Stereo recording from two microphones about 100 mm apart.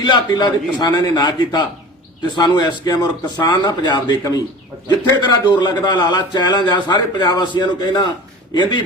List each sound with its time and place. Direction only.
0.0 s a man's voice: 45° left (ahead or behind)